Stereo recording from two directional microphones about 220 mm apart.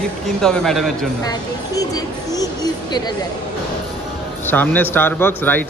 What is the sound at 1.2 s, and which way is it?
Speech, 15° left (ahead or behind).